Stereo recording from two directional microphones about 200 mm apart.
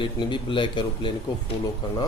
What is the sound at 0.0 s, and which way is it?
A man's voice, 25° left (ahead or behind).